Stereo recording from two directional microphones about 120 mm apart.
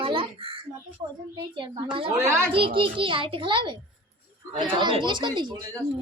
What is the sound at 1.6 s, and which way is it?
A child's voice, 45° right (ahead or behind).